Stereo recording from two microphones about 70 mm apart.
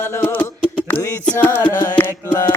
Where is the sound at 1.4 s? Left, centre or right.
Left.